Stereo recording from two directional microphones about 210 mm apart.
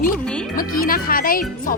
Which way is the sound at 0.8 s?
45° left (ahead or behind).